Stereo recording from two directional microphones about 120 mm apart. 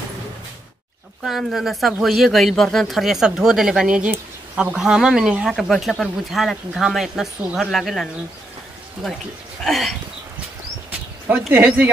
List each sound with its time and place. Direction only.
1.2 s speech: centre (ahead or behind)
10.9 s a sound: 15° right (ahead or behind)
11.5 s speech: 15° right (ahead or behind)